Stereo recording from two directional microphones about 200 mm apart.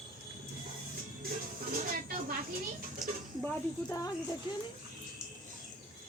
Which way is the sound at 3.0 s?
Centre (ahead or behind).